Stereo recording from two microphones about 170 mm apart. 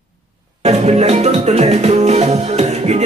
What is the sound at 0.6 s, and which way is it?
Music, 40° right (ahead or behind).